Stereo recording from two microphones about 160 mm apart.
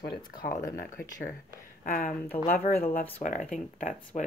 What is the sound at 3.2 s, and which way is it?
A woman's voice, 45° left (ahead or behind).